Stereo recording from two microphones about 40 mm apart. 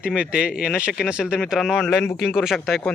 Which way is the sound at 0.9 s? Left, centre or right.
Centre.